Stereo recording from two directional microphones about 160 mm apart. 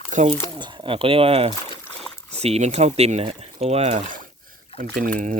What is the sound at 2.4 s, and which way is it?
Speech, 45° right (ahead or behind).